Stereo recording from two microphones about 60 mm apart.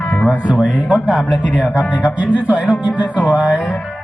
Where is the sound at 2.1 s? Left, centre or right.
Right.